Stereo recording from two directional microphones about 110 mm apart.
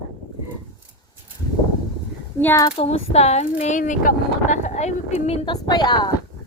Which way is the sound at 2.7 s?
70° left (ahead or behind).